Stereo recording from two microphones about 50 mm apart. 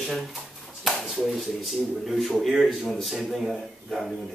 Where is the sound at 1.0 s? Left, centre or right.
Centre.